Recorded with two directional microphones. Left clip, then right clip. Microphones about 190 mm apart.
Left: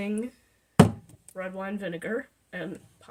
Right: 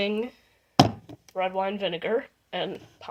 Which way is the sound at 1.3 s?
40° right (ahead or behind).